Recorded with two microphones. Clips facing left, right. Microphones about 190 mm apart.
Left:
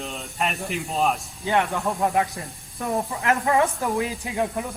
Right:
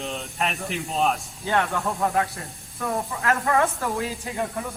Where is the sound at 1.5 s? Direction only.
15° left (ahead or behind).